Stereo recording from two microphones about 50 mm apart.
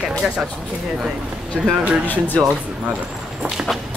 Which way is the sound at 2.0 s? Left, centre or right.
Left.